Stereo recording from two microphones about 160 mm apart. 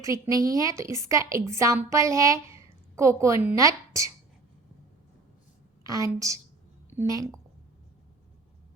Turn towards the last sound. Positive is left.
turn(degrees=-20)  # may be behind; listen again after turning